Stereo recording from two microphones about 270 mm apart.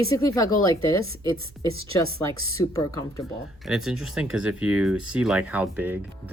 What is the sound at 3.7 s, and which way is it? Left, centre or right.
Speech, centre.